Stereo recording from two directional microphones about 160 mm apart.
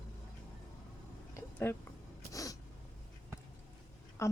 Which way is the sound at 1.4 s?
10° left (ahead or behind).